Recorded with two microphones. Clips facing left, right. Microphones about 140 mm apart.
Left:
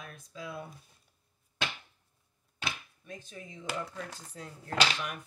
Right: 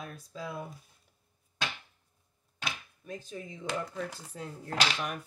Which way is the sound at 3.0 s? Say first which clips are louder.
Right 6 dB; 40° right (ahead or behind).